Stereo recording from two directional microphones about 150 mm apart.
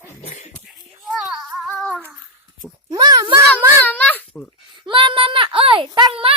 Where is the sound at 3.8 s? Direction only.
10° left (ahead or behind).